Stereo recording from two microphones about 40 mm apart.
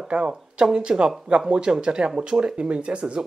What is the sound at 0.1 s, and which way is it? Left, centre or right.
Speech, right.